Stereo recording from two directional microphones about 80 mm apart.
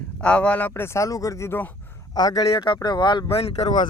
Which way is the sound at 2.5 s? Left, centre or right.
Left.